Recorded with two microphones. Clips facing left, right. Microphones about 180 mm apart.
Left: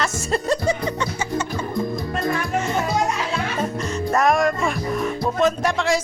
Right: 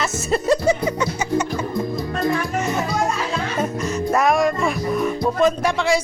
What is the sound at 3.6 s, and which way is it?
Music, 5° right (ahead or behind).